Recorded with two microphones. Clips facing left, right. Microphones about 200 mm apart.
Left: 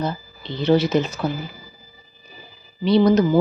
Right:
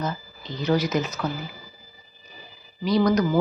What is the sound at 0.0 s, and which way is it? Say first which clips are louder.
Speech: left 4 dB; 30° left (ahead or behind).